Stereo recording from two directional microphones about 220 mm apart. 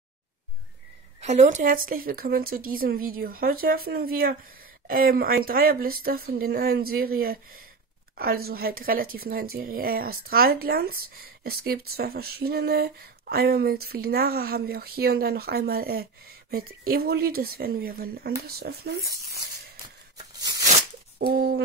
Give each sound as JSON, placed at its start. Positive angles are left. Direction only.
{"t": 1.2, "sound": "speech", "side_deg": -30}
{"t": 20.2, "sound": "tearing", "side_deg": -15}
{"t": 21.2, "sound": "speech", "side_deg": -45}